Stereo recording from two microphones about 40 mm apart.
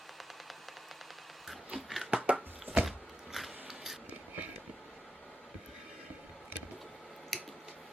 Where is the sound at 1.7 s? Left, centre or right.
Centre.